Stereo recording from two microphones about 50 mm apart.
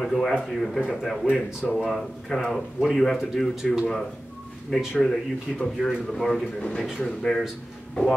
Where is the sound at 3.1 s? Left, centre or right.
Centre.